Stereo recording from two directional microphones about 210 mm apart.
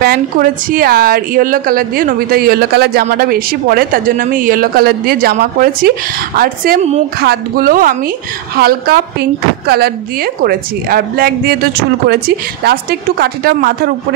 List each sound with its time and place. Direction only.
0.0 s a woman's voice: 45° right (ahead or behind)